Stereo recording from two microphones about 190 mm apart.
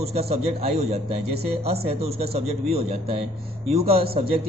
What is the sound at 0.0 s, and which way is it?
A man's voice, 35° right (ahead or behind).